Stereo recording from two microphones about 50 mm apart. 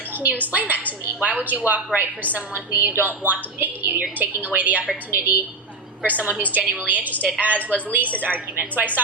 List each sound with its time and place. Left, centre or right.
0.5 s a woman's voice: right
7.5 s a woman's voice: left
8.2 s a woman's voice: right